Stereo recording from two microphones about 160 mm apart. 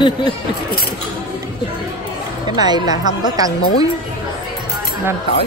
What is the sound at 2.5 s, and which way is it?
Speech, 25° right (ahead or behind).